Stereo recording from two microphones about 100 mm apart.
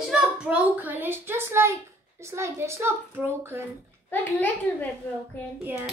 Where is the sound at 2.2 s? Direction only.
25° right (ahead or behind).